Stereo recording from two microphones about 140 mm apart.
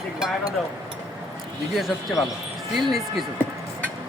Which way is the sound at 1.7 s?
Centre (ahead or behind).